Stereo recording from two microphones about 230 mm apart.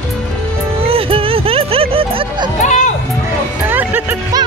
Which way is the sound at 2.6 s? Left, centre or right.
Left.